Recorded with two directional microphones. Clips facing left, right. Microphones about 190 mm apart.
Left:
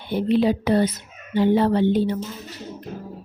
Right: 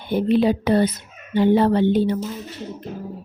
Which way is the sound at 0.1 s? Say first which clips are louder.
Right 2 dB; 50° right (ahead or behind).